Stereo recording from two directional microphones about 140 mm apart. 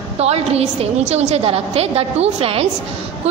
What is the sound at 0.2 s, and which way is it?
A woman's voice, 45° right (ahead or behind).